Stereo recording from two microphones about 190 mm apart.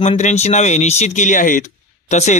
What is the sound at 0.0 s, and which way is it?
Speech, 35° left (ahead or behind).